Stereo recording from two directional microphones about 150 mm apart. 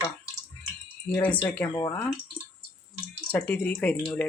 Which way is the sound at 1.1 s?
10° left (ahead or behind).